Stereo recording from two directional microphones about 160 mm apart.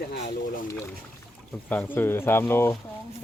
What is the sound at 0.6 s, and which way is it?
Speech, 20° left (ahead or behind).